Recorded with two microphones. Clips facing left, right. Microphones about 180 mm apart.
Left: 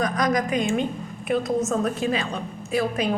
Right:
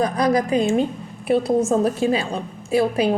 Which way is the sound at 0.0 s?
30° right (ahead or behind).